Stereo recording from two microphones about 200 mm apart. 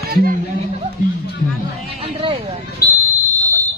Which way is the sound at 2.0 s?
30° right (ahead or behind).